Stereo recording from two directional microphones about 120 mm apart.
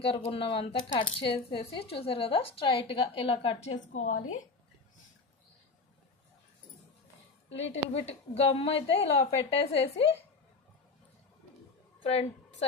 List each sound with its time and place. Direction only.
0.3 s speech: 50° left (ahead or behind)
3.9 s a woman's voice: 90° left
7.9 s a woman's voice: 55° left (ahead or behind)
12.0 s a woman's voice: 60° left (ahead or behind)